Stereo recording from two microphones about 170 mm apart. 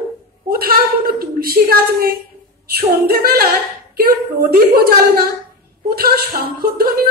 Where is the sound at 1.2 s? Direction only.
60° right (ahead or behind).